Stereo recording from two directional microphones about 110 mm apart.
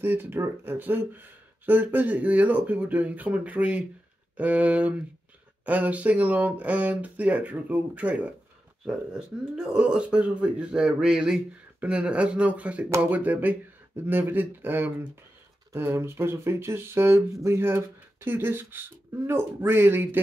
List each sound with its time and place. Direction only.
0.0 s speech: 20° right (ahead or behind)